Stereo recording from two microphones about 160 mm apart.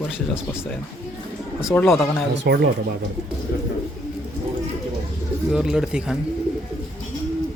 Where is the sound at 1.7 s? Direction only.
5° left (ahead or behind).